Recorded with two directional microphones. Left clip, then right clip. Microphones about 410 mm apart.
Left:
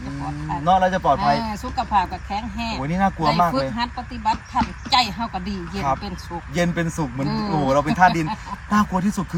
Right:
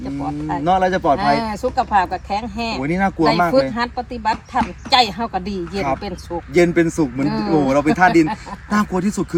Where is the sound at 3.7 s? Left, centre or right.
Right.